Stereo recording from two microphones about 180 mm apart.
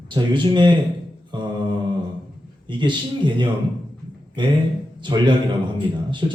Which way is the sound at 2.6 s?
25° right (ahead or behind).